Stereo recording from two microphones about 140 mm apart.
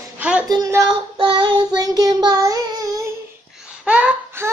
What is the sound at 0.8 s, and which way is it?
Child singing, 35° right (ahead or behind).